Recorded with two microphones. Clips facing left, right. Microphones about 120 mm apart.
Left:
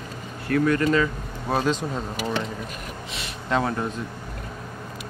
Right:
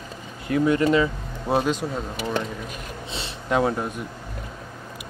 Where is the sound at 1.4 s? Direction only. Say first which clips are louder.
Right 1 dB; 10° right (ahead or behind).